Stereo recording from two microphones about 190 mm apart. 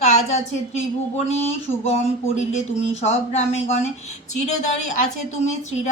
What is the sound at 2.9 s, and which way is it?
Speech, 35° left (ahead or behind).